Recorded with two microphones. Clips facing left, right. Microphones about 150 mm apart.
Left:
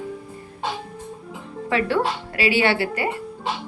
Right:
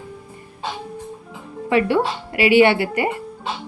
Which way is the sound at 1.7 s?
15° right (ahead or behind).